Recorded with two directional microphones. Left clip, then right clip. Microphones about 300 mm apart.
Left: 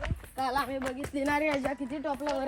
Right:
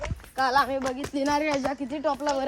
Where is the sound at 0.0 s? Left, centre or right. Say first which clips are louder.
Right 6 dB; centre.